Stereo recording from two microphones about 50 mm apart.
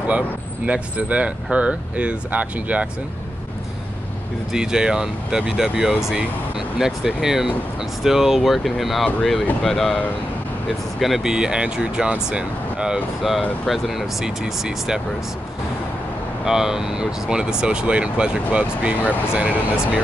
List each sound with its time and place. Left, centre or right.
0.7 s speech: right
4.5 s speech: centre
11.0 s speech: centre
11.3 s speech: centre
13.7 s speech: centre
16.4 s speech: centre